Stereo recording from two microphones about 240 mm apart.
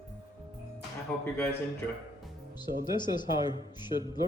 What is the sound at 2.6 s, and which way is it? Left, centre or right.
A woman's voice, centre.